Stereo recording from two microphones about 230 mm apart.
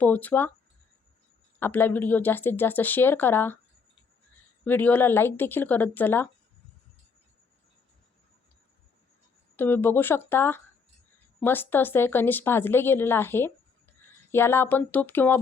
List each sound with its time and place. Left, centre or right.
0.0 s a woman's voice: centre
1.5 s a woman's voice: centre
4.6 s a woman's voice: centre
9.6 s a woman's voice: centre